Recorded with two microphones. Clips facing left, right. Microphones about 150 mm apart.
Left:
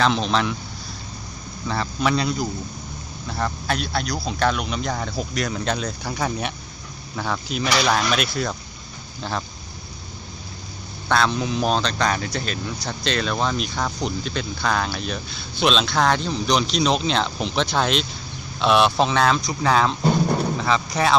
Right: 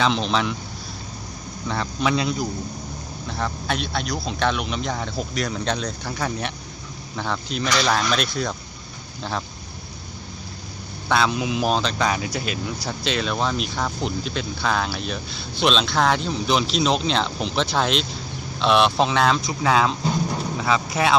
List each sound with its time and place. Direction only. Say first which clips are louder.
0.0 s speech: left 1 dB; centre (ahead or behind)
1.6 s speech: left 1 dB; centre (ahead or behind)
11.1 s speech: even; 5° right (ahead or behind)